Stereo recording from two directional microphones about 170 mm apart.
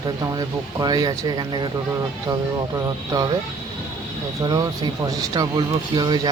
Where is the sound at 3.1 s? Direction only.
25° right (ahead or behind).